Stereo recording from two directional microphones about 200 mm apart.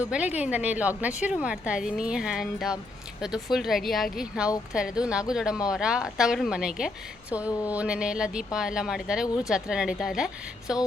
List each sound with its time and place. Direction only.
0.1 s a woman's voice: 5° right (ahead or behind)
9.2 s speech: 20° left (ahead or behind)
9.5 s a woman's voice: 5° right (ahead or behind)